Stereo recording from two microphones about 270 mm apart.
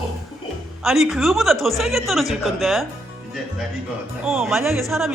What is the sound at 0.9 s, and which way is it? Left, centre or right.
A woman's voice, centre.